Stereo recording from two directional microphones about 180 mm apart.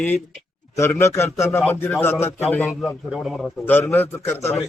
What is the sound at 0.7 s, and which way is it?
Speech, 15° left (ahead or behind).